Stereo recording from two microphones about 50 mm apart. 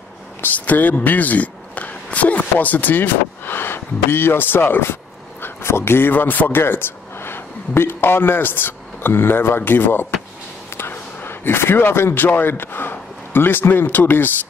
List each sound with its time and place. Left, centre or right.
0.4 s speech: left
5.4 s a man's voice: left